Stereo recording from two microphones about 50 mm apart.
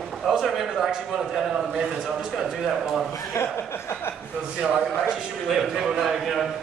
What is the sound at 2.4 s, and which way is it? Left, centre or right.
Speech, centre.